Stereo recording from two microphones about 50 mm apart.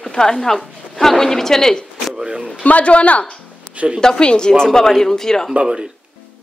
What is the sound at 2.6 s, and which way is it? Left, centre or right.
Speech, left.